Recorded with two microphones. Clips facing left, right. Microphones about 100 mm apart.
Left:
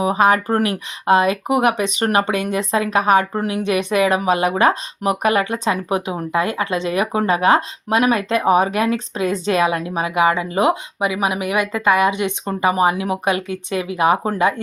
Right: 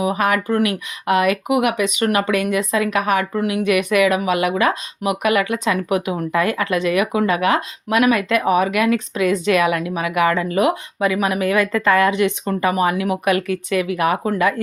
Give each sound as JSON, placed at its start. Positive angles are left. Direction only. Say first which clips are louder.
{"t": 0.0, "sound": "speech", "louder": "left 3 dB", "side_deg": 30}